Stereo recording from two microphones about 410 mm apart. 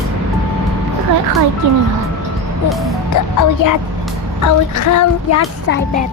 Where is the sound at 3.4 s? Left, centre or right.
Left.